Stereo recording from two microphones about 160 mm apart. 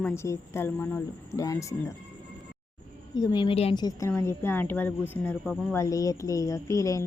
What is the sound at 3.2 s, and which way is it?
Speech, 30° left (ahead or behind).